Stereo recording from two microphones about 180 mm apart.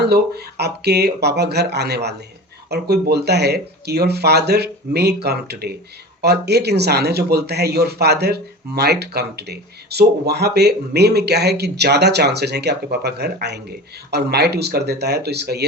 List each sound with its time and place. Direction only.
0.0 s speech: 65° right (ahead or behind)